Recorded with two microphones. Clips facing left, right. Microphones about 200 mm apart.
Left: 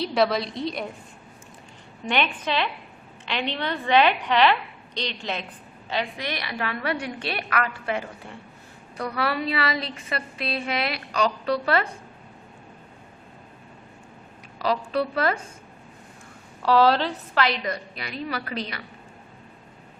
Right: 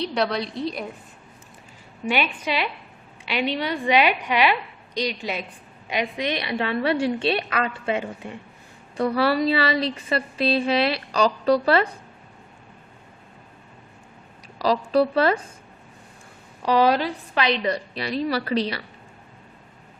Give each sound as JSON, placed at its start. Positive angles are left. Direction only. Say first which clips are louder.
{"t": 0.0, "sound": "a woman's voice", "louder": "left 2 dB", "side_deg": 0}
{"t": 2.0, "sound": "a woman's voice", "louder": "right 1 dB", "side_deg": -10}
{"t": 14.6, "sound": "a woman's voice", "louder": "right 5 dB", "side_deg": -35}
{"t": 16.6, "sound": "a woman's voice", "louder": "even", "side_deg": -15}